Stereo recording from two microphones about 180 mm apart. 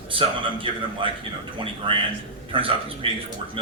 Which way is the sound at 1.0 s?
30° right (ahead or behind).